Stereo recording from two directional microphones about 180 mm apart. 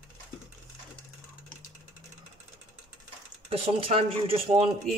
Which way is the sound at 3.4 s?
35° right (ahead or behind).